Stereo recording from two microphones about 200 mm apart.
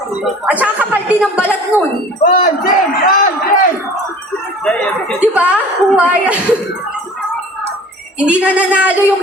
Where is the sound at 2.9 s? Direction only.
45° left (ahead or behind).